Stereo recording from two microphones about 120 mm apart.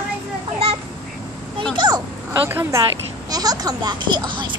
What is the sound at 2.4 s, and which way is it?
Speech, 20° right (ahead or behind).